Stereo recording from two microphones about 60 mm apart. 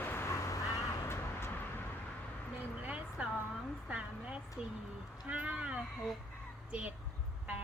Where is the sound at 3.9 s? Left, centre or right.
Centre.